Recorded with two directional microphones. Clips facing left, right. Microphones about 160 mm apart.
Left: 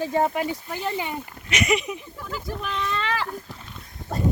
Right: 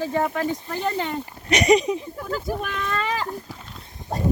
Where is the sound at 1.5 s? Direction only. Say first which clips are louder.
Right 6 dB; 35° right (ahead or behind).